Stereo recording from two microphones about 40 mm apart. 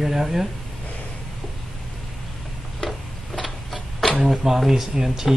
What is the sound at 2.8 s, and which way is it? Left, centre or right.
Tick-tock, centre.